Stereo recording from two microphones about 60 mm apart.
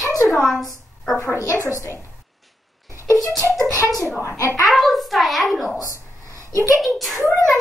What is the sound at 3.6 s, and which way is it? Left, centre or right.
Speech, left.